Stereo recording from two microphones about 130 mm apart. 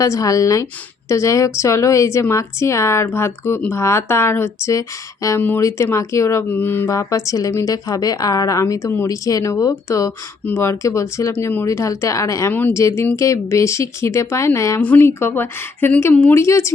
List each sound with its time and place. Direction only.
0.0 s a woman's voice: 25° left (ahead or behind)
14.8 s a woman's voice: 15° left (ahead or behind)